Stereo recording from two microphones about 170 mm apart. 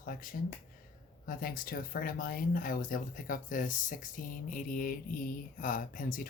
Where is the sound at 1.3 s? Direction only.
55° left (ahead or behind).